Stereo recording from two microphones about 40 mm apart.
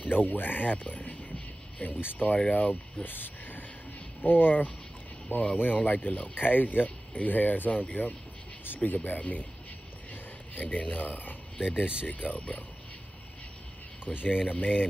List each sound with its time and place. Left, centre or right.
0.0 s a sound: left
2.0 s speech: left
2.2 s speech: left
5.3 s speech: left
5.6 s speech: left
10.5 s speech: left
11.8 s speech: right
12.1 s speech: left
14.0 s speech: left